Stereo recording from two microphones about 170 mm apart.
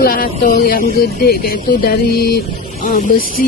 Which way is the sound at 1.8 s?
65° left (ahead or behind).